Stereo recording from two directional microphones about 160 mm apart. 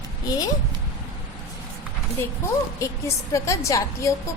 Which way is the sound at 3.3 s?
20° left (ahead or behind).